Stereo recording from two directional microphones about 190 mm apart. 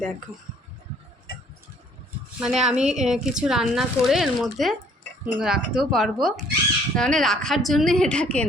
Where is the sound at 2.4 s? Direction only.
5° right (ahead or behind).